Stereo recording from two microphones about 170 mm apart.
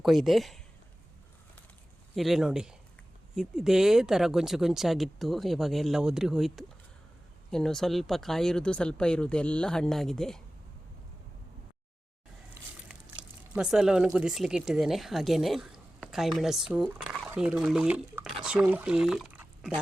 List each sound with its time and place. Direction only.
0.0 s speech: centre (ahead or behind)
2.1 s speech: centre (ahead or behind)
12.9 s speech: 5° right (ahead or behind)